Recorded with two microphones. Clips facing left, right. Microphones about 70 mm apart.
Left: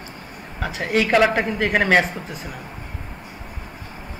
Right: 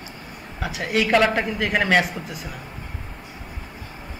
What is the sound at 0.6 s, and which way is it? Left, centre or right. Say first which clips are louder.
Speech: left 2 dB; left.